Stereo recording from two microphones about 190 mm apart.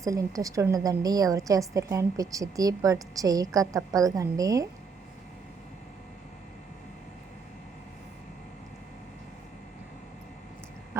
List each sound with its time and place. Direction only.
0.0 s a woman's voice: 15° right (ahead or behind)